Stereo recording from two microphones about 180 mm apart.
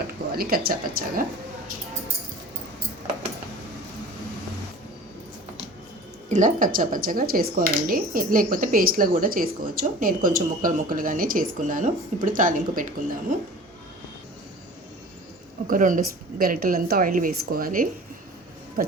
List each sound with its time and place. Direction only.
0.3 s speech: 55° right (ahead or behind)
6.2 s speech: 45° right (ahead or behind)
15.6 s speech: 50° right (ahead or behind)